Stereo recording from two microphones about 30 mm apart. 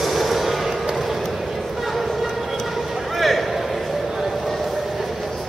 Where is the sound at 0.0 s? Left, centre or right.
Centre.